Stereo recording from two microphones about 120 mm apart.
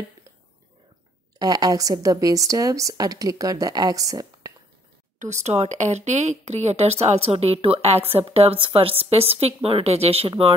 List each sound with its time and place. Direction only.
1.4 s speech: 35° right (ahead or behind)
5.2 s a woman's voice: 70° right (ahead or behind); by 10.5 s 55° right (ahead or behind)